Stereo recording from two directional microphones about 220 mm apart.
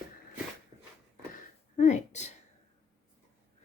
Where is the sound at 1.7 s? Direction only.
35° left (ahead or behind).